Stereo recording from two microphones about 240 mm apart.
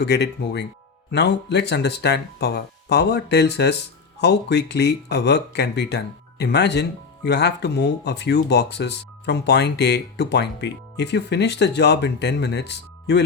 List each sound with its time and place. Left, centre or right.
0.0 s speech: left